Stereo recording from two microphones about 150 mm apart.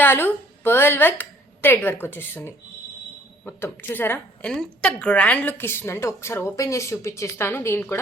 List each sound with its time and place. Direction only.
0.0 s a woman's voice: 15° left (ahead or behind)